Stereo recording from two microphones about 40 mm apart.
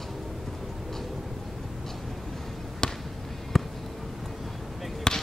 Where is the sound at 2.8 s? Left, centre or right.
Centre.